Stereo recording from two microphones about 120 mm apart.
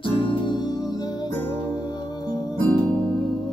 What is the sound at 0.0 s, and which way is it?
Music, 45° left (ahead or behind).